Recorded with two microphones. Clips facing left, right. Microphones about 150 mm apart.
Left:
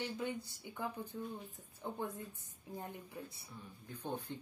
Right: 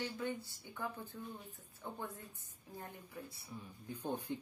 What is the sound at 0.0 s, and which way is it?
A woman's voice, 15° left (ahead or behind).